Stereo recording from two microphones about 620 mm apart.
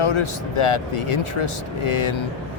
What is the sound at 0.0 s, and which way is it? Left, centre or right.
Speech, left.